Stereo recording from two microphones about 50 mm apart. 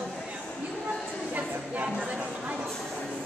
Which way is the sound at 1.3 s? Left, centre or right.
Right.